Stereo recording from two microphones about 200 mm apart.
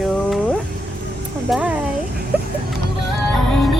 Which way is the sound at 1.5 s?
5° right (ahead or behind).